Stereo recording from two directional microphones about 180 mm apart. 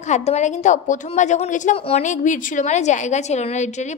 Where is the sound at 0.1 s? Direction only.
40° left (ahead or behind).